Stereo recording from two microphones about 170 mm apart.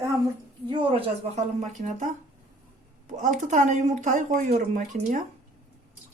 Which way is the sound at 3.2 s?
50° right (ahead or behind).